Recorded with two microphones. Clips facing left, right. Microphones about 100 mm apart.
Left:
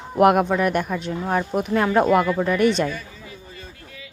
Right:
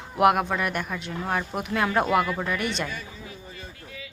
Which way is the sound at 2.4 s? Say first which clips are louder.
Left 9 dB; 45° left (ahead or behind).